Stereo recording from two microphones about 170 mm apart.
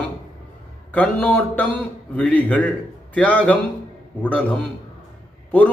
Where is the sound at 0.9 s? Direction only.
10° left (ahead or behind).